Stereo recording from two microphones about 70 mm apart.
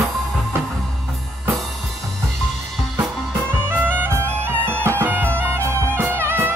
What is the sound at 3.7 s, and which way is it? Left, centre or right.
Music, right.